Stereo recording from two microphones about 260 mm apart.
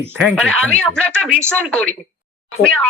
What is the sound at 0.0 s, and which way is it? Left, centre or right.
Speech, centre.